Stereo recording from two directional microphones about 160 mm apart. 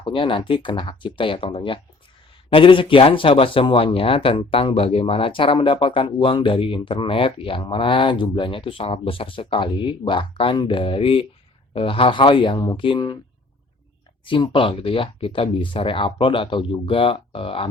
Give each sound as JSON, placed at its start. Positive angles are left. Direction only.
{"t": 0.0, "sound": "speech", "side_deg": 30}
{"t": 14.3, "sound": "speech", "side_deg": 30}